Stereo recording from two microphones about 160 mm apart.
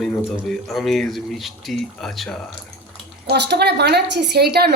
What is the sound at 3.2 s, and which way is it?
A woman's voice, 90° right.